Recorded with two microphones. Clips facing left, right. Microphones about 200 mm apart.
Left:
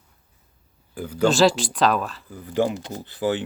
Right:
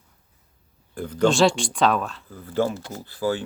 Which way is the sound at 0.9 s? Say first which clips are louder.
Even; 5° left (ahead or behind).